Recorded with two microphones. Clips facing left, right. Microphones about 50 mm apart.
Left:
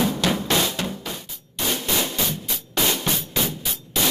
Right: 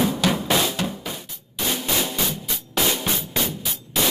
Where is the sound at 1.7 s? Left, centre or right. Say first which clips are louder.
Even; centre.